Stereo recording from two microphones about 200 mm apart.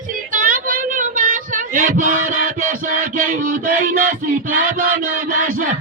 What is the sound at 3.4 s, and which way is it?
Music, 45° right (ahead or behind).